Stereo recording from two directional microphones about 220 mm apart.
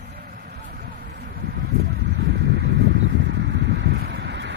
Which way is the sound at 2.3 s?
50° right (ahead or behind).